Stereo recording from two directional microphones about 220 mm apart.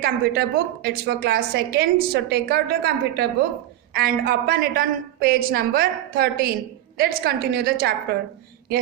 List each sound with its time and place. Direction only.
0.0 s a woman's voice: 45° right (ahead or behind)